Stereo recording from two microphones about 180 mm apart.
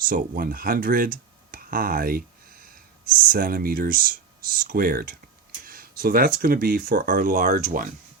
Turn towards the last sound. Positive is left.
turn(degrees=-50)  # may be behind; listen again after turning